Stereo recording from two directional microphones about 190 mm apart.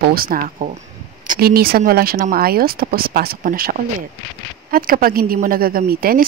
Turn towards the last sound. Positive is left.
turn(degrees=-50)  # may be behind; listen again after turning